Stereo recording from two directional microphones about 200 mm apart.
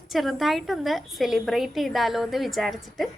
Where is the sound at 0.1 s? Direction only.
Centre (ahead or behind).